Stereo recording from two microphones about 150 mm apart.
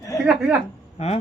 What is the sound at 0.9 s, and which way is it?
Speech, 45° left (ahead or behind).